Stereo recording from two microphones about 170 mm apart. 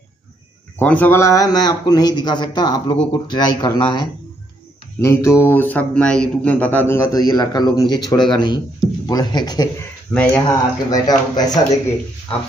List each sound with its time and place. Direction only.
0.7 s a man's voice: 10° left (ahead or behind)
10.1 s a man's voice: 10° left (ahead or behind)